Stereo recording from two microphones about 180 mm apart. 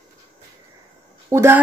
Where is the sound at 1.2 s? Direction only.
15° right (ahead or behind).